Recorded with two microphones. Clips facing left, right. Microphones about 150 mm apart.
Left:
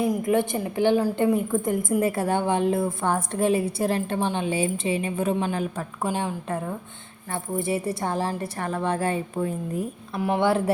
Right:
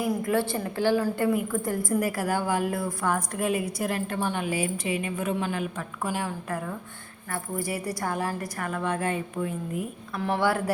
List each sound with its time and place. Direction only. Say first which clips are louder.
0.1 s a woman's voice: left 3 dB; 20° left (ahead or behind)
10.2 s a woman's voice: left 3 dB; 15° left (ahead or behind)